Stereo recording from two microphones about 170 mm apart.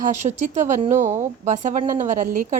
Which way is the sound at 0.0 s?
45° right (ahead or behind).